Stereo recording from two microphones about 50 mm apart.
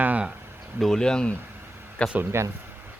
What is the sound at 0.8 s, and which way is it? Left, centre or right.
Speech, centre.